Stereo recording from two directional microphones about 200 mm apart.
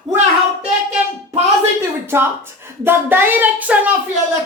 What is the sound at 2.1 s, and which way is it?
A woman's voice, 10° right (ahead or behind).